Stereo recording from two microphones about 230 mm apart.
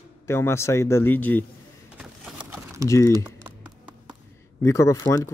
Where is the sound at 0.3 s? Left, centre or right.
Centre.